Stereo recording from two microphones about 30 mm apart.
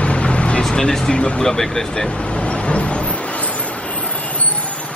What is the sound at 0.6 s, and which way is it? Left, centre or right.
Speech, left.